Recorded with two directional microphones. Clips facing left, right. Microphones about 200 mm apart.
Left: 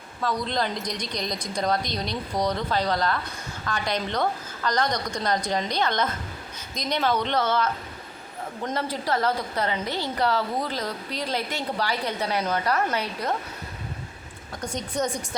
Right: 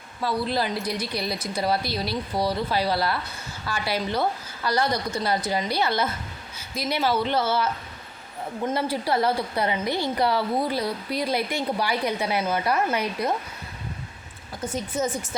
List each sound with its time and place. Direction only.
0.2 s a woman's voice: 10° right (ahead or behind)
14.6 s a woman's voice: 5° right (ahead or behind)